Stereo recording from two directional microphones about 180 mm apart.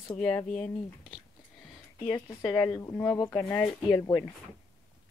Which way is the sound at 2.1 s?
20° left (ahead or behind).